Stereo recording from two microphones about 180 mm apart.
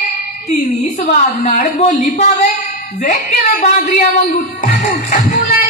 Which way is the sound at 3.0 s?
50° left (ahead or behind).